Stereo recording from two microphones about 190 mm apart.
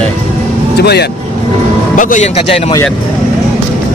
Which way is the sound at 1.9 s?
45° left (ahead or behind).